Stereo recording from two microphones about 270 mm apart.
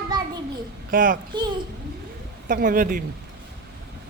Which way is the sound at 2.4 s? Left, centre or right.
Right.